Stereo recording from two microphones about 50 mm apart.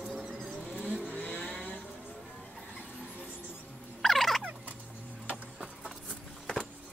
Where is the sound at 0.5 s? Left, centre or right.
Centre.